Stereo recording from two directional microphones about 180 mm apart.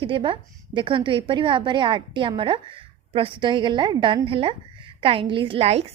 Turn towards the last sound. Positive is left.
turn(degrees=-35)  # may be behind; listen again after turning